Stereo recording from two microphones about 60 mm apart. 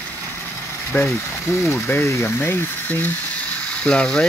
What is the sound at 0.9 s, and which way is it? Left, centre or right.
Speech, left.